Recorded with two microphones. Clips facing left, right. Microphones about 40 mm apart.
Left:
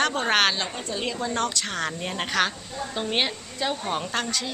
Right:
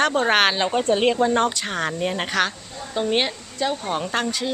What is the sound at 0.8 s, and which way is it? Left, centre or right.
Speech, right.